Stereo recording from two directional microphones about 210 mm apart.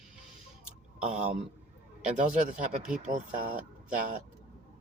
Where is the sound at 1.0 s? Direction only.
30° right (ahead or behind).